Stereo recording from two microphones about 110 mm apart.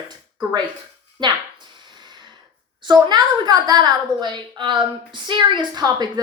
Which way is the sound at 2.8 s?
40° right (ahead or behind).